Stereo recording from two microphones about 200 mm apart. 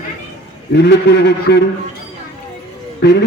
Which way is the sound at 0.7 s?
55° left (ahead or behind).